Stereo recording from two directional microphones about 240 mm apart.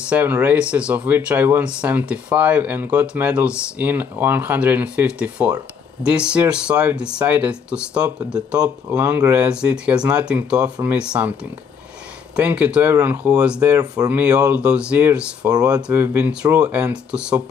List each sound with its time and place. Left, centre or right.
0.1 s speech: centre
12.4 s speech: centre